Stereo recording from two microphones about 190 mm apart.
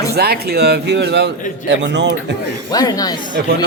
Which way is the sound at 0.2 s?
55° right (ahead or behind).